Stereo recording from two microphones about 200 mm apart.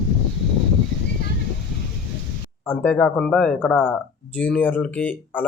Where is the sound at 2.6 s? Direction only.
10° left (ahead or behind).